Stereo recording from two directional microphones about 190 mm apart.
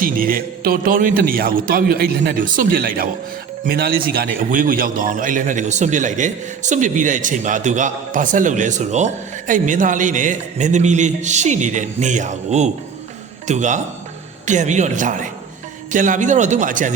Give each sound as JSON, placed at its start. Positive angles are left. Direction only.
{"t": 0.0, "sound": "a man's voice", "side_deg": -50}